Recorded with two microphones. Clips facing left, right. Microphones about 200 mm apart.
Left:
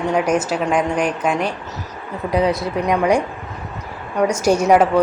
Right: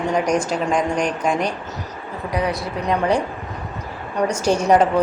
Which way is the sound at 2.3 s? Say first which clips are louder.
Left 5 dB; 25° left (ahead or behind).